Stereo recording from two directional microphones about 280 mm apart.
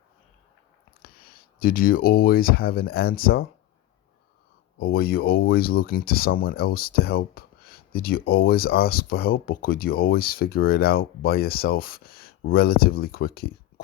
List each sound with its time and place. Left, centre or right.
1.0 s speech: left
4.8 s speech: left